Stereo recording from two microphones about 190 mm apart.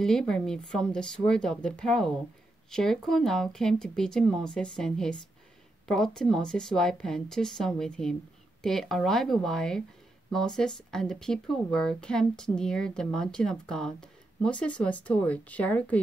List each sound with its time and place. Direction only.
0.0 s speech: 5° left (ahead or behind)